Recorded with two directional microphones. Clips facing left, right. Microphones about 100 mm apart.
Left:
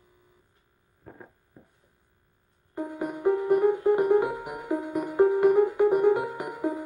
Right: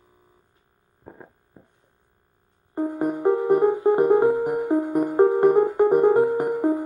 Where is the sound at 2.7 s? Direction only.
40° right (ahead or behind).